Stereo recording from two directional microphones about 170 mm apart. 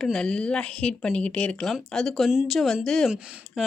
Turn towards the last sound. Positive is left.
turn(degrees=-5)  # may be behind; listen again after turning